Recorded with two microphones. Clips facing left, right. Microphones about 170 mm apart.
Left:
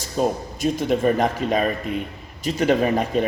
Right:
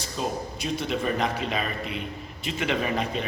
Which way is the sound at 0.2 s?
45° left (ahead or behind).